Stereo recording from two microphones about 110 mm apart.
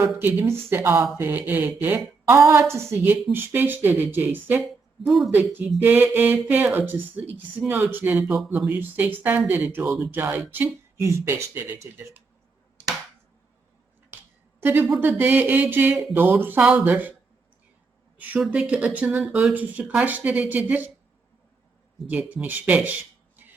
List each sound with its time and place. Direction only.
0.2 s a woman's voice: 20° right (ahead or behind)
5.0 s speech: centre (ahead or behind)
5.3 s a woman's voice: 20° right (ahead or behind)
14.1 s finger snapping: 20° right (ahead or behind)
14.6 s a woman's voice: 15° right (ahead or behind)
18.2 s speech: 15° right (ahead or behind)
22.1 s speech: 10° right (ahead or behind)